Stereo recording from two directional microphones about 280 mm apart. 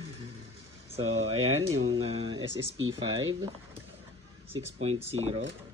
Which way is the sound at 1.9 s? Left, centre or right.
Centre.